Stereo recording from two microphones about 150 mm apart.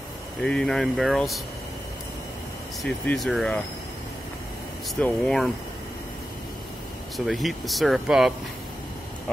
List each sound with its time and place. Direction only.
0.4 s speech: 5° left (ahead or behind)
2.8 s speech: 5° left (ahead or behind)
5.0 s speech: centre (ahead or behind)
7.2 s speech: centre (ahead or behind)